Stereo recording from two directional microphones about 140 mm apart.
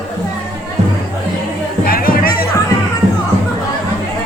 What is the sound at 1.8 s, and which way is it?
Music, 90° left.